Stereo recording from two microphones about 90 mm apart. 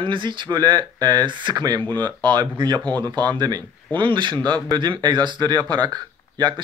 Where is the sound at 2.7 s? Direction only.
15° left (ahead or behind).